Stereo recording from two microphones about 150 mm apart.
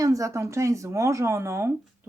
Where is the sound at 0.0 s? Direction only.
20° right (ahead or behind).